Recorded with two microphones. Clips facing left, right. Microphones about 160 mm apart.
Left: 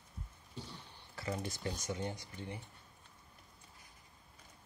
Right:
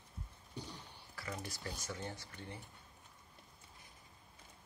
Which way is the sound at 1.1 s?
25° left (ahead or behind).